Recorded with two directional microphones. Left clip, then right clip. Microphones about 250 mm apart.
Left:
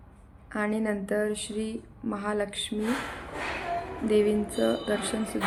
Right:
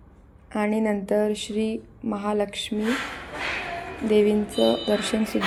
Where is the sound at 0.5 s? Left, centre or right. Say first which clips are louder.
Right 5 dB; centre.